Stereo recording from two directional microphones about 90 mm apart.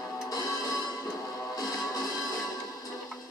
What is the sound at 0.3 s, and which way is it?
Music, 45° left (ahead or behind).